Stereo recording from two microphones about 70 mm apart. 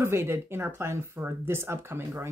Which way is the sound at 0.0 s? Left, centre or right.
Right.